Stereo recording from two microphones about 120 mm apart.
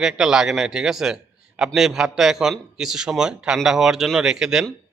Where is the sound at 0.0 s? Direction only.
5° right (ahead or behind).